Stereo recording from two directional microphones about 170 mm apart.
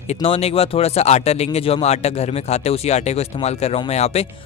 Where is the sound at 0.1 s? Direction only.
35° left (ahead or behind).